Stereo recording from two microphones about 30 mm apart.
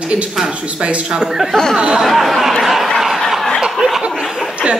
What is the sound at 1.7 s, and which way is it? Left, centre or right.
Speech, right.